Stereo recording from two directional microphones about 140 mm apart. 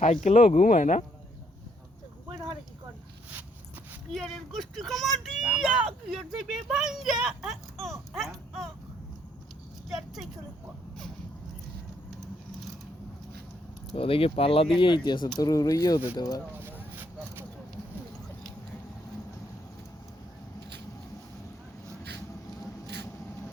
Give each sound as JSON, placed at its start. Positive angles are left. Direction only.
{"t": 0.0, "sound": "speech", "side_deg": 60}
{"t": 4.1, "sound": "speech", "side_deg": 0}
{"t": 8.1, "sound": "a sound", "side_deg": 0}
{"t": 13.9, "sound": "speech", "side_deg": 40}